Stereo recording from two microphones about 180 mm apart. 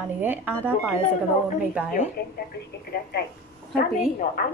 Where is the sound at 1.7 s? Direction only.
5° right (ahead or behind).